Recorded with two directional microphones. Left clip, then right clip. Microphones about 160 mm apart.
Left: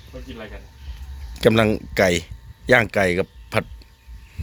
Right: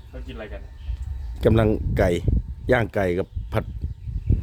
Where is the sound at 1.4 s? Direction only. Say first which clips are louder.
Left 3 dB; 10° right (ahead or behind).